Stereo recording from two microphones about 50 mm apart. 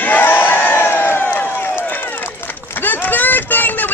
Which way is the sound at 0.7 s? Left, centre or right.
Left.